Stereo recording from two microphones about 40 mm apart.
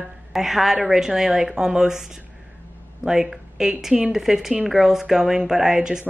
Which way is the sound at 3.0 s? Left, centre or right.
Centre.